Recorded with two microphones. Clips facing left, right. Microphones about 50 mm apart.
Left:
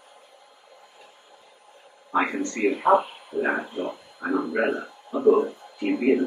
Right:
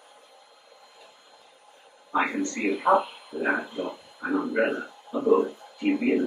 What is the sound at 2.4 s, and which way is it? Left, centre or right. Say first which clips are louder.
Speech: left 3 dB; left.